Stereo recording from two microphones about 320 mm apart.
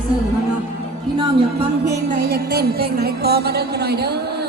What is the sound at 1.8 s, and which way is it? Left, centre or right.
Music, right.